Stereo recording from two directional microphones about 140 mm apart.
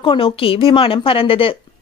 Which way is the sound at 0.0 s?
40° left (ahead or behind).